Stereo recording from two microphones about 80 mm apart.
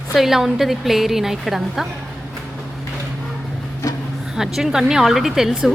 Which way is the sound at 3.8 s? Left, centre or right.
Left.